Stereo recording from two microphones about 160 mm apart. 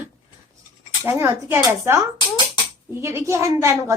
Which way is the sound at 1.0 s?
15° right (ahead or behind).